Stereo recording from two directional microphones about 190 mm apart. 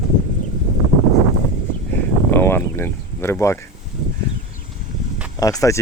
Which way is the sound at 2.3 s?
10° left (ahead or behind).